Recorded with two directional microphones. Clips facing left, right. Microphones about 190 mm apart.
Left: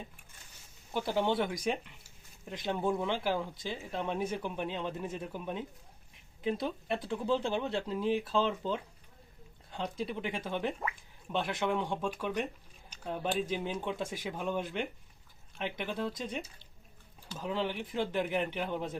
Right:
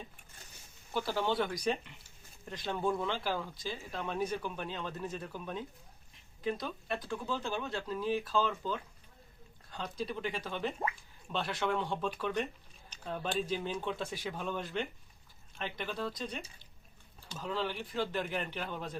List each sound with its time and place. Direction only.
0.9 s speech: 20° left (ahead or behind)